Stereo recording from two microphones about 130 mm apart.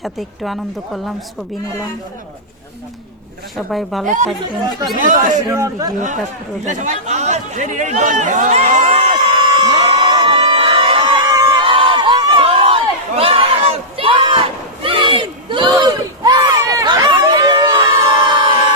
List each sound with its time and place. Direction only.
0.0 s speech: centre (ahead or behind)
3.7 s speech: centre (ahead or behind)
4.0 s speech: 75° right (ahead or behind)
4.9 s speech: 90° right
5.5 s a man's voice: 25° right (ahead or behind)
6.7 s speech: 70° right (ahead or behind)
9.4 s a sound: 35° right (ahead or behind)
9.8 s crowd: 40° right (ahead or behind)
17.8 s a sound: 30° right (ahead or behind)